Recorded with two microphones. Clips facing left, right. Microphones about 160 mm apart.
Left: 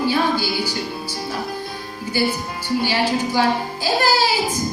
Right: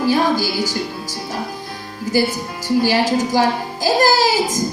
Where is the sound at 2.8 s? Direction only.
40° right (ahead or behind).